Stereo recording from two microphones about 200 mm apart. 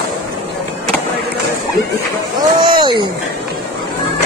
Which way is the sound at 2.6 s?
20° right (ahead or behind).